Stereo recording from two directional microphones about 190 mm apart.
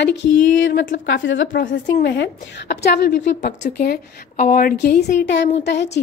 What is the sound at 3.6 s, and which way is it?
A woman's voice, 50° left (ahead or behind).